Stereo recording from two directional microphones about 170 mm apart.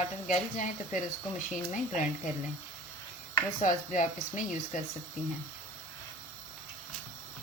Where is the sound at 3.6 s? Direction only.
45° left (ahead or behind).